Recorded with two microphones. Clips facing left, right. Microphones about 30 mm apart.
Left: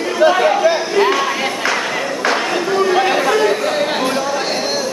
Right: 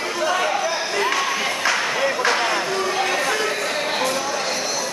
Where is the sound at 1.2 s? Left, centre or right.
Centre.